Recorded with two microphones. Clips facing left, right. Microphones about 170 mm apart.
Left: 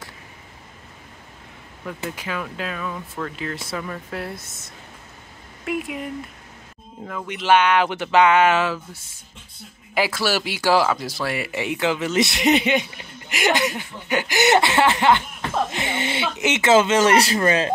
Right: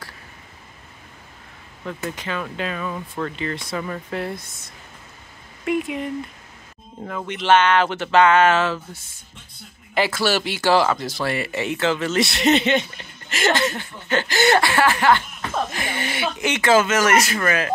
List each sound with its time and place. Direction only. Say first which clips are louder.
2.0 s speech: right 1 dB; 5° left (ahead or behind)
5.7 s speech: right 4 dB; centre (ahead or behind)
7.2 s speech: right 1 dB; 10° left (ahead or behind)
9.9 s speech: right 1 dB; 5° left (ahead or behind); by 17.6 s 30° left (ahead or behind)